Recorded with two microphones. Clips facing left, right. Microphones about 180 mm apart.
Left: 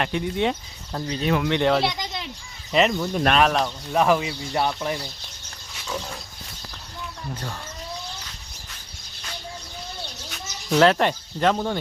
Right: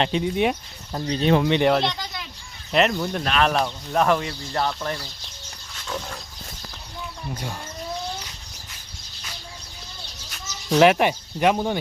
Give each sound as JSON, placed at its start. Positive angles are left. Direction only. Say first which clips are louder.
{"t": 0.0, "sound": "speech", "louder": "right 2 dB", "side_deg": -20}
{"t": 1.0, "sound": "speech", "louder": "right 4 dB", "side_deg": -30}
{"t": 1.5, "sound": "speech", "louder": "right 2 dB", "side_deg": -15}
{"t": 1.7, "sound": "speech", "louder": "even", "side_deg": 5}
{"t": 5.7, "sound": "pig", "louder": "even", "side_deg": 5}
{"t": 10.2, "sound": "bird", "louder": "right 2 dB", "side_deg": 0}
{"t": 10.8, "sound": "speech", "louder": "right 1 dB", "side_deg": -15}